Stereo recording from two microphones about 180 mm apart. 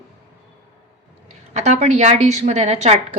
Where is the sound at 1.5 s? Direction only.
40° right (ahead or behind).